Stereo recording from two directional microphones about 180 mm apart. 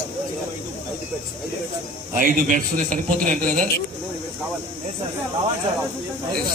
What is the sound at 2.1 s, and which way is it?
A man's voice, 50° right (ahead or behind).